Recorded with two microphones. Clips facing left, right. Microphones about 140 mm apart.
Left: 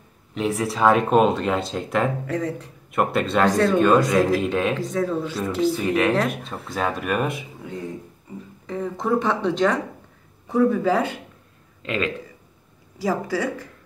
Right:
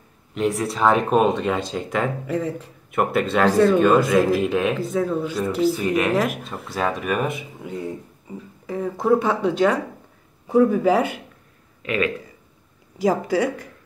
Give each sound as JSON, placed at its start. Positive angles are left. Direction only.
{"t": 0.3, "sound": "speech", "side_deg": 0}
{"t": 8.6, "sound": "a woman's voice", "side_deg": -10}
{"t": 13.0, "sound": "speech", "side_deg": -20}